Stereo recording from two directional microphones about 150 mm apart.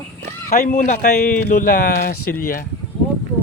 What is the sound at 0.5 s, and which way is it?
Speech, 70° left (ahead or behind).